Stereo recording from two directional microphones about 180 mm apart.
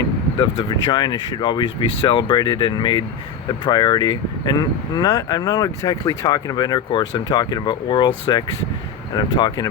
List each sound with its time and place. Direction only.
0.5 s speech: 25° left (ahead or behind)